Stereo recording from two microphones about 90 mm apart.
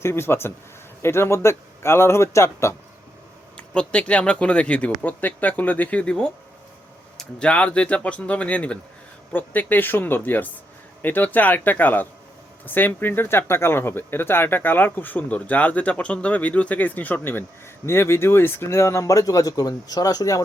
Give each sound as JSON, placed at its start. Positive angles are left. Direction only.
{"t": 0.0, "sound": "speech", "side_deg": 25}
{"t": 3.6, "sound": "speech", "side_deg": 15}